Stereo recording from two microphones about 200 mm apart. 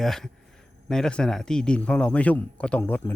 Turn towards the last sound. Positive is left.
turn(degrees=10)  # may be behind; listen again after turning